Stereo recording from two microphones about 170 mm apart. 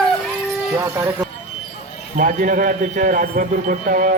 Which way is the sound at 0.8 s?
15° right (ahead or behind).